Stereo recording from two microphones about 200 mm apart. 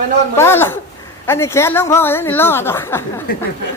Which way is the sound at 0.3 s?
10° left (ahead or behind).